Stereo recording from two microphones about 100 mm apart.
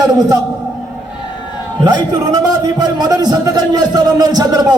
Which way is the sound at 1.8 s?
45° right (ahead or behind).